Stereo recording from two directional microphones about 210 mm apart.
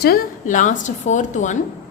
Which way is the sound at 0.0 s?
40° left (ahead or behind).